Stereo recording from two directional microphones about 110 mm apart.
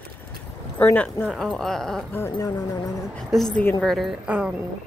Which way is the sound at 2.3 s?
35° left (ahead or behind).